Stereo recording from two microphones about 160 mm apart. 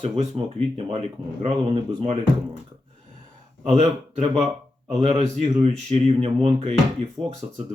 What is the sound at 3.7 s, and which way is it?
Speech, 45° right (ahead or behind).